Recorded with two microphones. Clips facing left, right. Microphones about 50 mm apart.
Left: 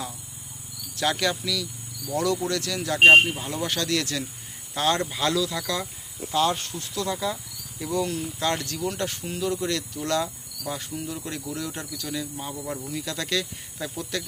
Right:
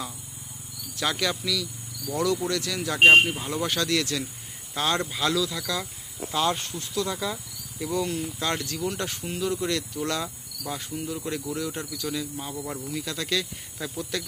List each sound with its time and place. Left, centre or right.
0.9 s speech: centre
3.8 s speech: centre
4.8 s cricket: centre
5.4 s speech: centre
5.7 s cricket: centre
6.3 s speech: centre
6.6 s cricket: centre
7.1 s speech: centre
8.0 s cricket: centre
12.1 s speech: centre